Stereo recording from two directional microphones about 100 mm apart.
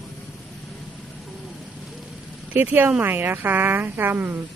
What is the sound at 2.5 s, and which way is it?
Speech, 20° right (ahead or behind).